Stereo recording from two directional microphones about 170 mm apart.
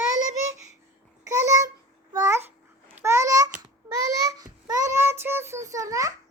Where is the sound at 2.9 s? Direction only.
15° right (ahead or behind).